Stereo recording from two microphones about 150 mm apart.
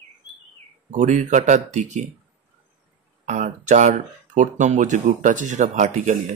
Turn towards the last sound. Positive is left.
turn(degrees=-55)  # may be behind; listen again after turning